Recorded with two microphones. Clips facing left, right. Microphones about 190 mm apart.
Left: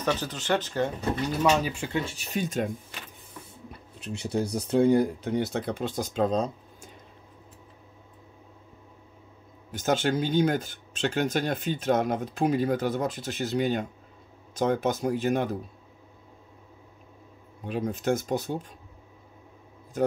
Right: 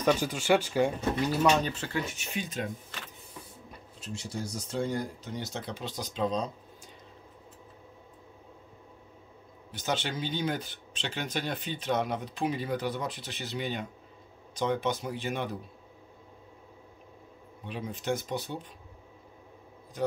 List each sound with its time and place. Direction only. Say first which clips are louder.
0.0 s speech: right 2 dB; 10° right (ahead or behind); by 1.9 s 10° left (ahead or behind)
1.9 s speech: left 3 dB; 25° left (ahead or behind)
2.1 s speech: left 6 dB; 40° left (ahead or behind)
4.0 s speech: left 8 dB; 60° left (ahead or behind)
9.7 s speech: left 7 dB; 45° left (ahead or behind)
17.6 s speech: left 6 dB; 45° left (ahead or behind)